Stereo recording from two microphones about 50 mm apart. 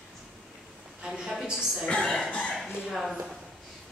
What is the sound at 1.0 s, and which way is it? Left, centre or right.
Speech, centre.